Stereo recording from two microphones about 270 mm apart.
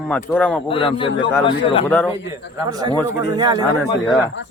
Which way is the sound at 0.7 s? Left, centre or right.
Centre.